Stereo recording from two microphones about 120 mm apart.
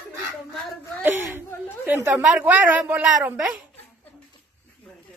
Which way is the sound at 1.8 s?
15° right (ahead or behind).